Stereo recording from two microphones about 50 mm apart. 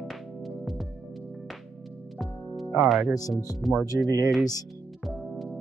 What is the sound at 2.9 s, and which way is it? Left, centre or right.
Speech, centre.